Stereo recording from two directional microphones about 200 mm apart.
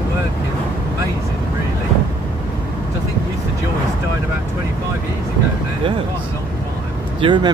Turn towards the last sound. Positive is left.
turn(degrees=-20)  # may be behind; listen again after turning